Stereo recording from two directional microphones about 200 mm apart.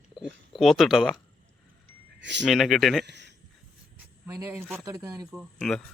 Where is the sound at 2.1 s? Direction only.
65° right (ahead or behind).